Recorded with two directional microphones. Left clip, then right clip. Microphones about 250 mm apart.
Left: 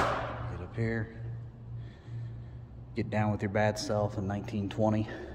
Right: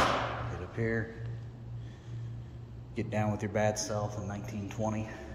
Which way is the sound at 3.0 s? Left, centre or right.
Centre.